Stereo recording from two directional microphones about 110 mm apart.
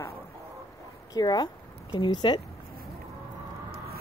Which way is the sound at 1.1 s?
40° left (ahead or behind).